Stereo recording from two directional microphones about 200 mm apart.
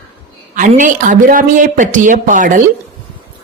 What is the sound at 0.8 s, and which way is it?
Speech, 40° right (ahead or behind).